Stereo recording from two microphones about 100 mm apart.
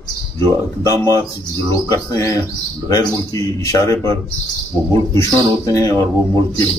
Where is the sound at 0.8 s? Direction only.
35° left (ahead or behind).